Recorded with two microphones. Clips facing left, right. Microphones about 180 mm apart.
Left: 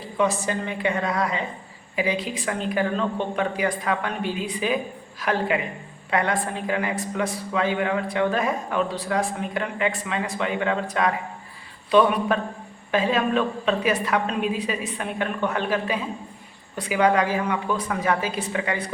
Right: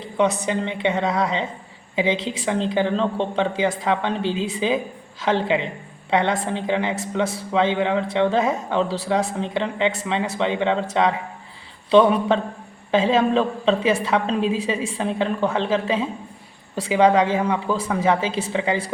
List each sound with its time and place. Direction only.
0.0 s a woman's voice: 20° right (ahead or behind)